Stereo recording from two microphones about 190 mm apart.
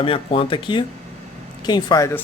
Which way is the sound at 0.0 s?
30° left (ahead or behind).